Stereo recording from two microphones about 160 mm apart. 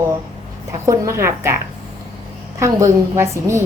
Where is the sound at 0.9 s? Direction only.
20° right (ahead or behind).